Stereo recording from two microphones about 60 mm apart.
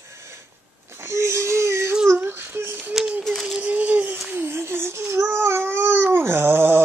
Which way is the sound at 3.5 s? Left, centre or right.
Right.